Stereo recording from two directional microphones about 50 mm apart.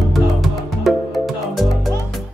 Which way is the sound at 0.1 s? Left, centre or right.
Centre.